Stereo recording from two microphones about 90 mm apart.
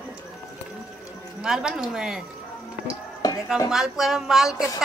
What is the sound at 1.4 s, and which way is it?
Speech, 5° right (ahead or behind).